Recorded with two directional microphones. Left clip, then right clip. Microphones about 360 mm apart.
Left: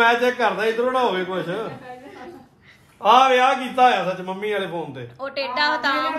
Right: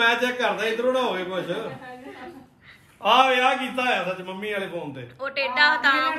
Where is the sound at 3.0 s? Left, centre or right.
Left.